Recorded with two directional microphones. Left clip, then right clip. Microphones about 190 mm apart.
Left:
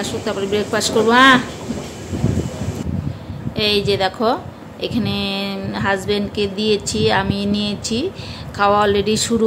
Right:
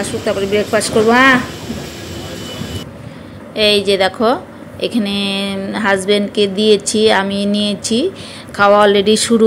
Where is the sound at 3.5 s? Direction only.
10° right (ahead or behind).